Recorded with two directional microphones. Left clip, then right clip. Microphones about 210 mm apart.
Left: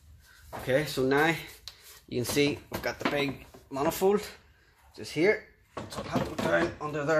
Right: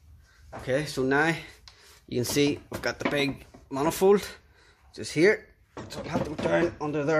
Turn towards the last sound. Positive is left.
turn(degrees=-45)  # may be behind; listen again after turning